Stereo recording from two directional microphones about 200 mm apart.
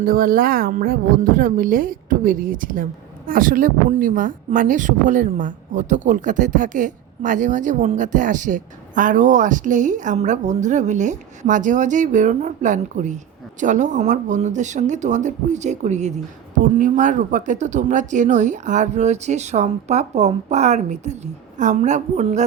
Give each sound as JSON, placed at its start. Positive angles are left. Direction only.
{"t": 0.0, "sound": "a woman's voice", "side_deg": -45}